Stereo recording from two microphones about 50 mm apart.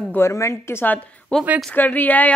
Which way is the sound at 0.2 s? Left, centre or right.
Left.